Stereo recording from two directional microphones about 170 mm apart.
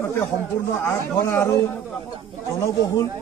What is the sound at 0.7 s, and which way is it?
Speech, 15° left (ahead or behind).